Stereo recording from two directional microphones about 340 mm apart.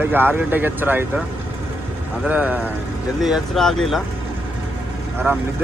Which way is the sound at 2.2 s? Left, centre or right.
Centre.